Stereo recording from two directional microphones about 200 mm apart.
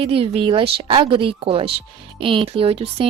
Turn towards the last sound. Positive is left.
turn(degrees=-30)  # may be behind; listen again after turning